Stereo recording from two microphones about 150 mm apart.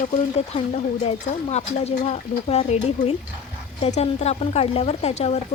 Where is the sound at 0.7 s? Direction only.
45° left (ahead or behind).